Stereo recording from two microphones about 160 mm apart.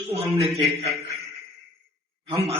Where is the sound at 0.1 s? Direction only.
40° right (ahead or behind).